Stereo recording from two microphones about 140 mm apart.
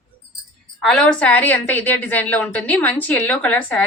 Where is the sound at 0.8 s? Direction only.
5° left (ahead or behind).